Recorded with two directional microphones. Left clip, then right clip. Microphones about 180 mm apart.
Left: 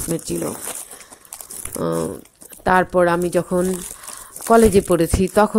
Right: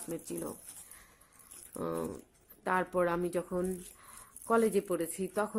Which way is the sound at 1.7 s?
35° left (ahead or behind).